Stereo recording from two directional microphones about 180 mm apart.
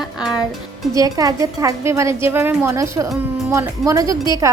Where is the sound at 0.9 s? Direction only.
20° right (ahead or behind).